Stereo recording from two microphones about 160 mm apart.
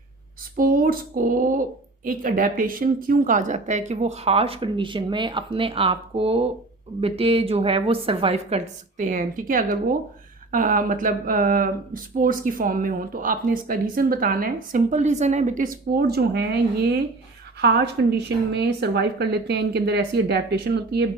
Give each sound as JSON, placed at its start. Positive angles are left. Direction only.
{"t": 0.5, "sound": "a woman's voice", "side_deg": -60}